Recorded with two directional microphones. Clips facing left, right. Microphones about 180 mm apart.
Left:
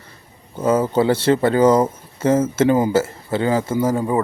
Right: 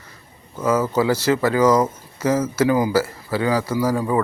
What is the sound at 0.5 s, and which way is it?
Speech, 30° left (ahead or behind).